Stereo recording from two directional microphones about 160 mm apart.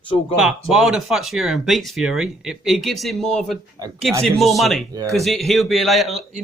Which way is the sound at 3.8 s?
25° right (ahead or behind).